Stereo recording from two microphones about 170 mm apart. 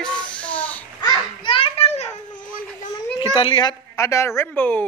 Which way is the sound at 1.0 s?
30° left (ahead or behind).